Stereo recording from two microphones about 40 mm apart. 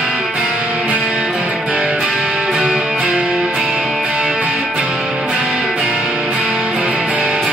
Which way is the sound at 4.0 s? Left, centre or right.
Right.